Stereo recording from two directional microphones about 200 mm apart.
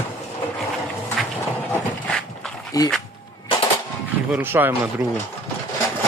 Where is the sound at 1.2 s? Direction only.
Centre (ahead or behind).